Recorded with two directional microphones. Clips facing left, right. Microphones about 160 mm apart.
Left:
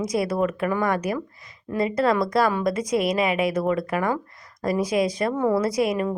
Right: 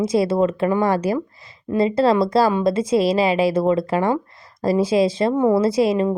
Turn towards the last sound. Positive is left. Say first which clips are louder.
# right 5 dB
turn(degrees=-25)  # may be behind; listen again after turning